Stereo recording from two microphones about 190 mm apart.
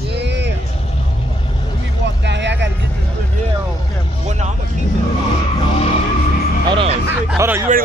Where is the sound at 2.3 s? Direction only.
65° right (ahead or behind).